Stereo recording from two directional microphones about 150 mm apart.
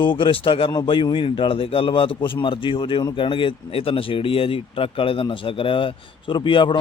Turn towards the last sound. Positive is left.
turn(degrees=35)  # may be behind; listen again after turning